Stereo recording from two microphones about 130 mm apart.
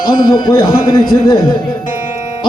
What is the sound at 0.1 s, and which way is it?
A man's voice, 35° left (ahead or behind).